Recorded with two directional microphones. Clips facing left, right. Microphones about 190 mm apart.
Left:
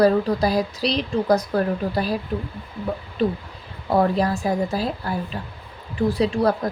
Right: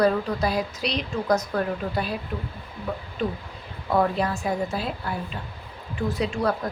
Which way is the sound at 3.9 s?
35° left (ahead or behind).